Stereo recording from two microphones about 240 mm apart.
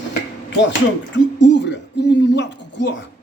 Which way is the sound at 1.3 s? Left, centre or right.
Left.